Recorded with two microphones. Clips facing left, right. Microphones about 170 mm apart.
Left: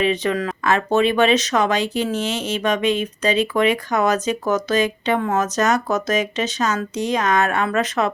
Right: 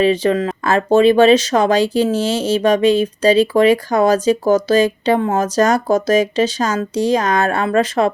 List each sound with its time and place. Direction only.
0.0 s speech: 30° right (ahead or behind)